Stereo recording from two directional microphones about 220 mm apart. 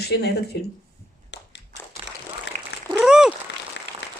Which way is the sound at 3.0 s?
5° right (ahead or behind).